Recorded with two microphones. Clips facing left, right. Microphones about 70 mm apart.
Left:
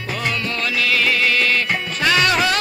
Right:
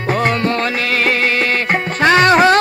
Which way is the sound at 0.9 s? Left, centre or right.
Right.